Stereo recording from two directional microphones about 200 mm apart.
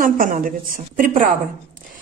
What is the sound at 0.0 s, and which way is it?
A woman's voice, 45° right (ahead or behind).